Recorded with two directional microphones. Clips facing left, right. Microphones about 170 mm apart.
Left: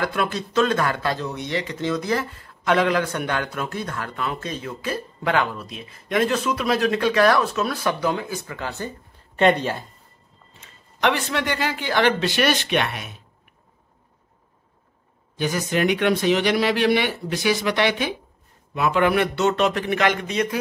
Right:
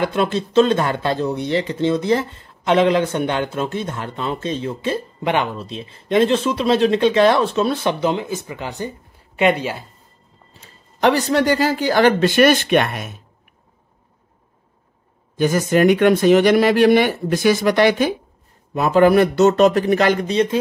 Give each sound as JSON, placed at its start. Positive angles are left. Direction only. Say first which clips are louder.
{"t": 0.0, "sound": "speech", "louder": "right 5 dB", "side_deg": -25}
{"t": 10.6, "sound": "speech", "louder": "right 5 dB", "side_deg": -35}
{"t": 15.3, "sound": "speech", "louder": "right 7 dB", "side_deg": -45}